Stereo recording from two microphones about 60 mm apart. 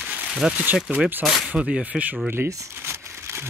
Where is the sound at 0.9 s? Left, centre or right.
Right.